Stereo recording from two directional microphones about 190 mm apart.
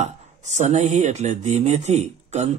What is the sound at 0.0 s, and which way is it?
Speech, 35° right (ahead or behind).